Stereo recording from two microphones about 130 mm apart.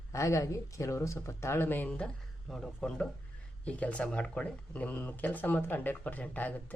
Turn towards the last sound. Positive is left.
turn(degrees=10)  # may be behind; listen again after turning